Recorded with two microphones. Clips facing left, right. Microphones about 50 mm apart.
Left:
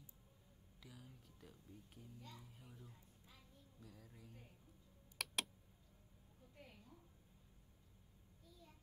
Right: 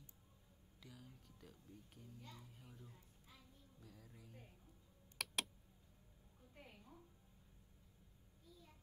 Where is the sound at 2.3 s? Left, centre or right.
Centre.